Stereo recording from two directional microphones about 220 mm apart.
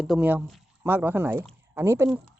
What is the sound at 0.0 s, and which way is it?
Speech, 5° right (ahead or behind).